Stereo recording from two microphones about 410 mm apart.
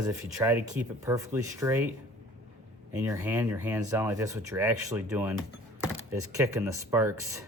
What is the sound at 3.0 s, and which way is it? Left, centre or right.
Speech, centre.